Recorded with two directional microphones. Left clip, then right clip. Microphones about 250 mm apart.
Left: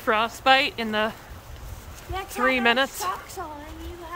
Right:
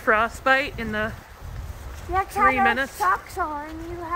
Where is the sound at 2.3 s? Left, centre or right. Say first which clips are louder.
Right 1 dB; centre.